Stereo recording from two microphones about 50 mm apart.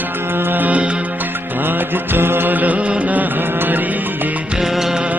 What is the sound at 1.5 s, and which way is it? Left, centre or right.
Music, right.